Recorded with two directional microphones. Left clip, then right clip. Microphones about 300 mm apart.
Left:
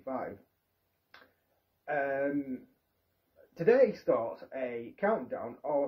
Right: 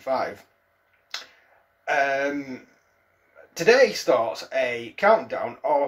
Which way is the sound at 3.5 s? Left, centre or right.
Centre.